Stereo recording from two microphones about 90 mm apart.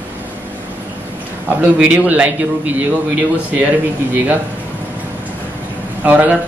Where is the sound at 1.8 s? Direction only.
15° right (ahead or behind).